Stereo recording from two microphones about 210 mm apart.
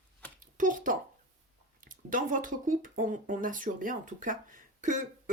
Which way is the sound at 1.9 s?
40° right (ahead or behind).